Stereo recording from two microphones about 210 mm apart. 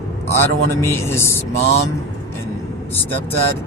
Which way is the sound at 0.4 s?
10° left (ahead or behind).